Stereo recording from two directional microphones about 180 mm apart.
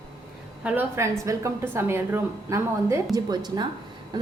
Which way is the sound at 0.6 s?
10° right (ahead or behind).